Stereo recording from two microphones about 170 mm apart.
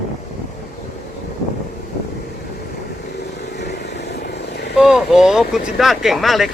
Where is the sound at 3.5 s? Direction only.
80° left.